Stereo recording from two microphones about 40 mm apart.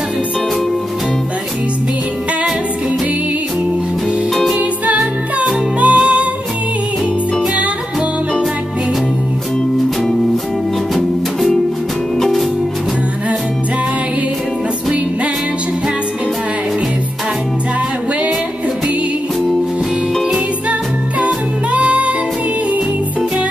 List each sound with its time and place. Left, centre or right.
4.6 s music: right
11.0 s music: centre
21.7 s music: right